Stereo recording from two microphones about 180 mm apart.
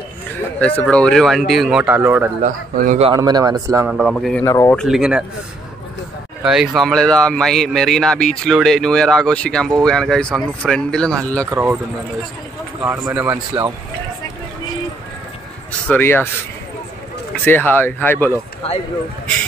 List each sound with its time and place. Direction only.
0.6 s speech: 5° left (ahead or behind); by 2.3 s 10° right (ahead or behind)
2.4 s speech: 50° right (ahead or behind)
3.2 s speech: 20° right (ahead or behind)
3.9 s speech: centre (ahead or behind)
4.5 s speech: 15° left (ahead or behind)
4.7 s speech: centre (ahead or behind)
6.4 s speech: 5° right (ahead or behind)
11.5 s speech: 10° right (ahead or behind)
12.8 s speech: 10° right (ahead or behind)
15.9 s speech: 10° left (ahead or behind)
17.5 s speech: 10° left (ahead or behind)